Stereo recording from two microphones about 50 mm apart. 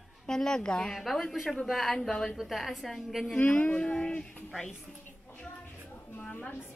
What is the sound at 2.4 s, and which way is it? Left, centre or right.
Speech, centre.